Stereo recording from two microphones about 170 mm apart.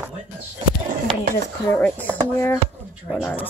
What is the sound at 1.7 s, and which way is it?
Speech, 10° left (ahead or behind).